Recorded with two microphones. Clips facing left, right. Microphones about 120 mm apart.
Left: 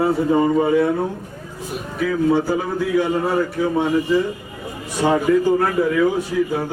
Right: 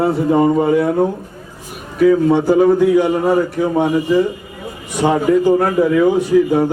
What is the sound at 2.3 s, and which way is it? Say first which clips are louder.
A man's voice: right 7 dB; 20° right (ahead or behind).